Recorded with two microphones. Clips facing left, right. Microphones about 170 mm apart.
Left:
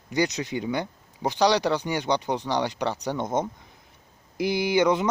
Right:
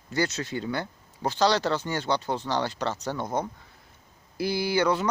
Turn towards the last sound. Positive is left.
turn(degrees=20)  # may be behind; listen again after turning